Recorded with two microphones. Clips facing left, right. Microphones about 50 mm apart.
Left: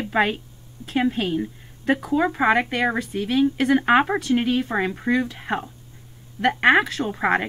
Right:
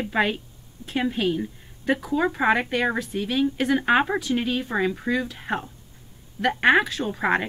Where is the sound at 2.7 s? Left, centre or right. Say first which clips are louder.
Left 1 dB; left.